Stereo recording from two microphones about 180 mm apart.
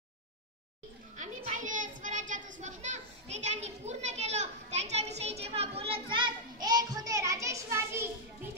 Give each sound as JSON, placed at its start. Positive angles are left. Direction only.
{"t": 1.1, "sound": "a child's voice", "side_deg": -45}